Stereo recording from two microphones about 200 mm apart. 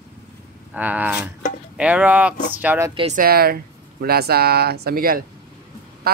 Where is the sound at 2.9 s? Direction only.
30° right (ahead or behind).